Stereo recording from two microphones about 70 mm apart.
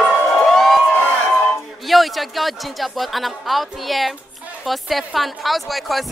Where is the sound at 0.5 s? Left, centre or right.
Centre.